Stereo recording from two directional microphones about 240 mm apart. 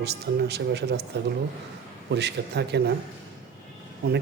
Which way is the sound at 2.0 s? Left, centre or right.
Right.